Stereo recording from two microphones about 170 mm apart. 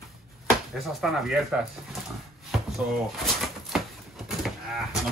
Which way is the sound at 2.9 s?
Centre (ahead or behind).